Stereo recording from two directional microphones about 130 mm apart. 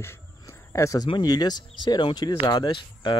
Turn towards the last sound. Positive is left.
turn(degrees=35)  # may be behind; listen again after turning